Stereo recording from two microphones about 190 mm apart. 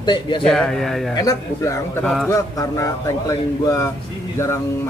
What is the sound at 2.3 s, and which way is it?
Speech, 15° left (ahead or behind).